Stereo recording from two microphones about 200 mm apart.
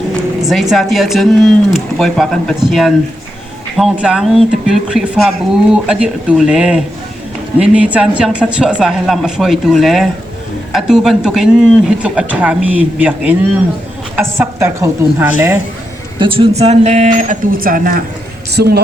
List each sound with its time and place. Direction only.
0.4 s a woman's voice: centre (ahead or behind)
16.1 s a man's voice: 25° right (ahead or behind); by 18.8 s 55° right (ahead or behind)